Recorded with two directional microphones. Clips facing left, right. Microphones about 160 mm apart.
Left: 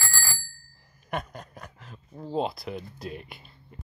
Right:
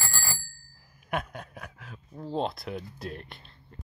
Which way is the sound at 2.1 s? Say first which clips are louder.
Left 2 dB; 5° left (ahead or behind).